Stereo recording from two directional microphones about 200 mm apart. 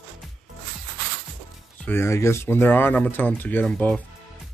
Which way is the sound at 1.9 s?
10° left (ahead or behind).